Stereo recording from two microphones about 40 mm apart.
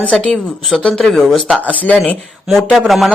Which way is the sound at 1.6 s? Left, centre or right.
Left.